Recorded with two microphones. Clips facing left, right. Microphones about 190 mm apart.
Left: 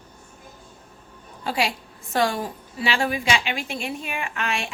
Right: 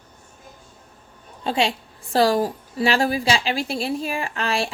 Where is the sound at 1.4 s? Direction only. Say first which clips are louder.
Right 3 dB; 25° right (ahead or behind).